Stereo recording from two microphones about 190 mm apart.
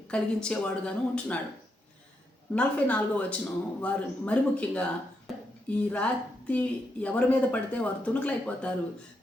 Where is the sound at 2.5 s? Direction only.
10° left (ahead or behind).